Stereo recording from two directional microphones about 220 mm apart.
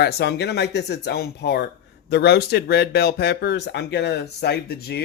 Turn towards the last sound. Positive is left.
turn(degrees=45)  # may be behind; listen again after turning